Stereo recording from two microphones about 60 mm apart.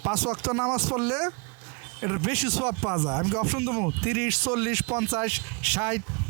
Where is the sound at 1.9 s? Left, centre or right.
Right.